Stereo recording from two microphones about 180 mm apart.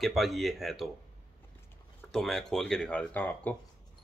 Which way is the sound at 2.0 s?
Centre (ahead or behind).